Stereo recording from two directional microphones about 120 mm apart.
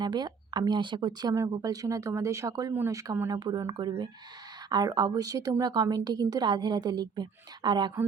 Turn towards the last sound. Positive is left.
turn(degrees=-35)  # may be behind; listen again after turning